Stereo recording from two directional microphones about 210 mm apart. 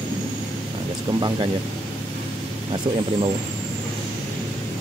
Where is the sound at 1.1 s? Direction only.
20° right (ahead or behind).